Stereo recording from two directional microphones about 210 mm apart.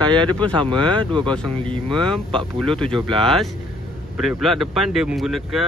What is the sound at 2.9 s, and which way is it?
Speech, 25° right (ahead or behind).